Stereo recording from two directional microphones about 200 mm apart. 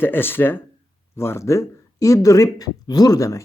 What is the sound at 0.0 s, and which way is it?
Speech, 10° left (ahead or behind).